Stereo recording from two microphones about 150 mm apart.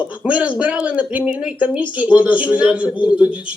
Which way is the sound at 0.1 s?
10° right (ahead or behind).